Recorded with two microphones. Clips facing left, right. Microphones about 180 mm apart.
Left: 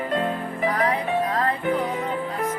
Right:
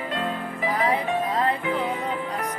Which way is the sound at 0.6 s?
25° right (ahead or behind).